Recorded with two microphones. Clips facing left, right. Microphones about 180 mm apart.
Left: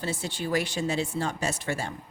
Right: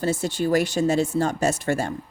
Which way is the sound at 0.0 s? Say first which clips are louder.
Right 8 dB; 45° right (ahead or behind).